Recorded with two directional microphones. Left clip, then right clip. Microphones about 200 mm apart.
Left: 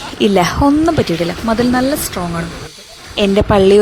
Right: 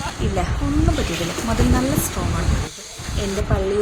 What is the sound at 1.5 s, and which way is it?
Speech, 35° left (ahead or behind).